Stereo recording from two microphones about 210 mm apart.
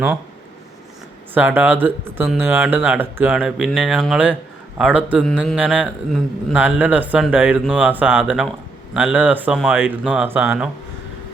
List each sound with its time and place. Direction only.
1.3 s a man's voice: 10° right (ahead or behind)